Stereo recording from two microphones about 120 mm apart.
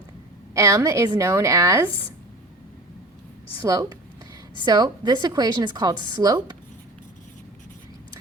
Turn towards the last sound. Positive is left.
turn(degrees=-35)  # may be behind; listen again after turning